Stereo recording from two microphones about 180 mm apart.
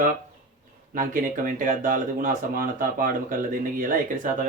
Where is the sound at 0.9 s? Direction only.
50° right (ahead or behind).